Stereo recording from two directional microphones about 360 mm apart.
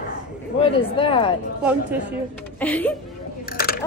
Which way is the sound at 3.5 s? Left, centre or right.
Left.